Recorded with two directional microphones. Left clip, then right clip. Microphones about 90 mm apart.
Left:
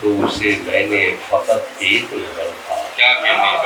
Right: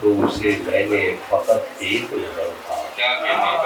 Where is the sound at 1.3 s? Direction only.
40° right (ahead or behind).